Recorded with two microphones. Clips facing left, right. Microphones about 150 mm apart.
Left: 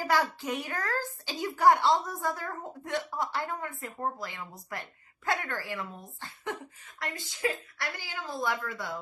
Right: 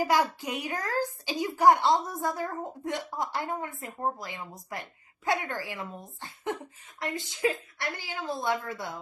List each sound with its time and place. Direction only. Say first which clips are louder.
0.0 s a child's voice: right 2 dB; 15° right (ahead or behind)